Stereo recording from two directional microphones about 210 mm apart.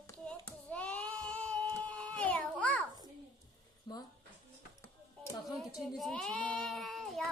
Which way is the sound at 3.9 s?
20° left (ahead or behind).